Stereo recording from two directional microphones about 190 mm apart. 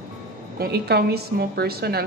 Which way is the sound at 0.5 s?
55° right (ahead or behind).